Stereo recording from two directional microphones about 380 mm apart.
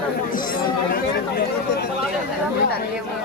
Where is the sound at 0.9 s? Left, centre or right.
Left.